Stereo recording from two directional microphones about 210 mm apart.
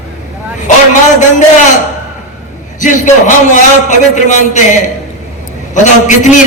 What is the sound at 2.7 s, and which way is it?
A man's voice, 35° left (ahead or behind).